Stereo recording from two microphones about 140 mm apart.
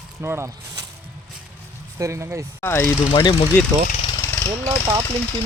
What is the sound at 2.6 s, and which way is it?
Speech, 15° left (ahead or behind).